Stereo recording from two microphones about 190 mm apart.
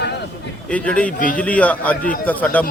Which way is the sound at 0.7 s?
5° left (ahead or behind).